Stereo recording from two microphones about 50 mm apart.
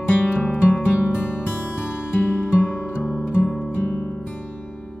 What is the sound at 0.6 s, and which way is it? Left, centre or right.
Music, left.